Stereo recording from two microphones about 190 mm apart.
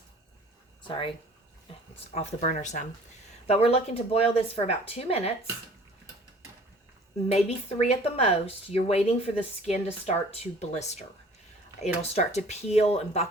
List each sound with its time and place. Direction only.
0.9 s speech: 25° left (ahead or behind)
2.1 s speech: 40° left (ahead or behind)
7.3 s speech: 35° left (ahead or behind)
12.1 s speech: 35° left (ahead or behind)